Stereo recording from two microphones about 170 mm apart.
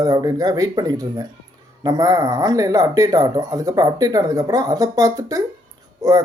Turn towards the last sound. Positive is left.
turn(degrees=-20)  # may be behind; listen again after turning